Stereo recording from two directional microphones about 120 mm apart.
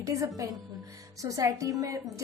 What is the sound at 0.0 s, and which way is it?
Music, 25° right (ahead or behind).